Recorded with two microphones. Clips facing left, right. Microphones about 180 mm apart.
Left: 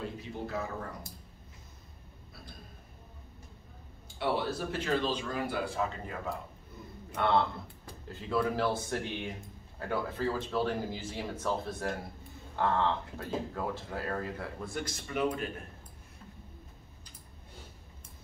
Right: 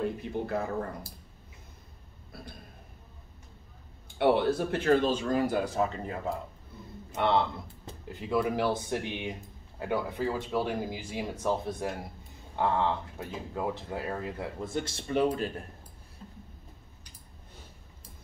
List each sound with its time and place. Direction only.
0.0 s speech: 55° right (ahead or behind)
4.2 s speech: 60° right (ahead or behind); by 6.1 s 40° right (ahead or behind)
7.2 s speech: 20° right (ahead or behind)